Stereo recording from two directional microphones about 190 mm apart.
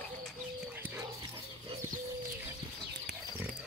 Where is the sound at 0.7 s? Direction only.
10° right (ahead or behind).